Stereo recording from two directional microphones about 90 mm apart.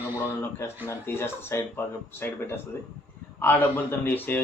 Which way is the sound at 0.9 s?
25° left (ahead or behind).